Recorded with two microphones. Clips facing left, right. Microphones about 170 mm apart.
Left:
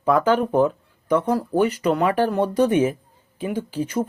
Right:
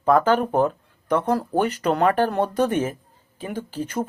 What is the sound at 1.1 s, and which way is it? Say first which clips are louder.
Speech: left 1 dB; 60° right (ahead or behind).